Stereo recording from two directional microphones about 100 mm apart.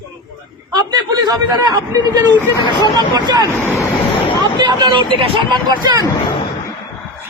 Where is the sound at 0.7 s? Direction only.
40° right (ahead or behind).